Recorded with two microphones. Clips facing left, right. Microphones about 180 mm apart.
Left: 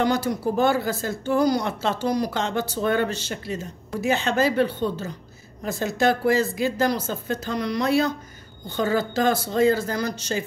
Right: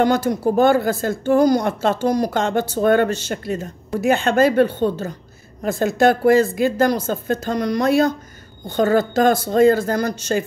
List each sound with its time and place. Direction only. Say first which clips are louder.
0.0 s speech: right 5 dB; 50° right (ahead or behind)